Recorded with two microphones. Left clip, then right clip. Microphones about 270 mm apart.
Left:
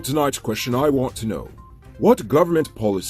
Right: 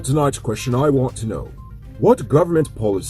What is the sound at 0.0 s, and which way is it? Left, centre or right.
Speech, left.